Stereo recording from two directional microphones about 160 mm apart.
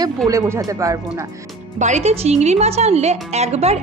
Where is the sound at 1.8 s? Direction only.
45° right (ahead or behind).